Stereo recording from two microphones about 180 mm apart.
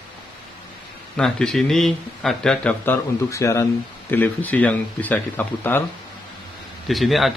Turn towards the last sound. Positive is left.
turn(degrees=0)  # may be behind; listen again after turning